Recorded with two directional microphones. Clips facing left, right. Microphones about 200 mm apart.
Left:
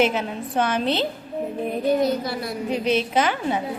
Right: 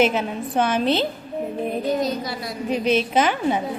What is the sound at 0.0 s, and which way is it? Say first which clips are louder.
A woman's voice: right 2 dB; 20° right (ahead or behind).